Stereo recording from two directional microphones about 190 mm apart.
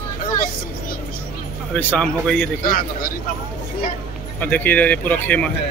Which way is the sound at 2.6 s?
50° left (ahead or behind).